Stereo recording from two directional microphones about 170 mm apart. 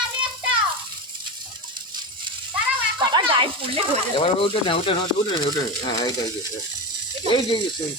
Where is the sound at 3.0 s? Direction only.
30° right (ahead or behind).